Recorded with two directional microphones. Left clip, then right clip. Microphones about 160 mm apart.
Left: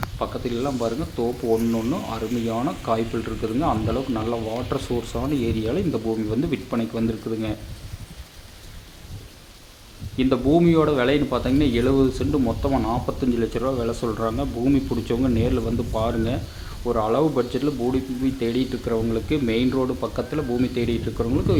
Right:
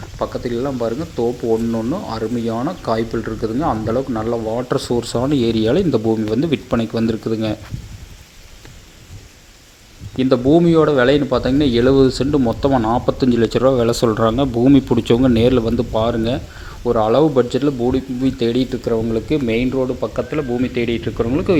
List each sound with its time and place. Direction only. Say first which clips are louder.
0.2 s speech: right 6 dB; 25° right (ahead or behind)
10.2 s speech: right 6 dB; 30° right (ahead or behind)
18.9 s speech: right 5 dB; 20° right (ahead or behind)
19.7 s a man's voice: right 5 dB; 10° right (ahead or behind)
21.2 s speech: right 6 dB; 25° right (ahead or behind)